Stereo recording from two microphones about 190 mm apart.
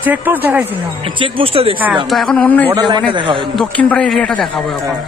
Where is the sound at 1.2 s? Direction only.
30° right (ahead or behind).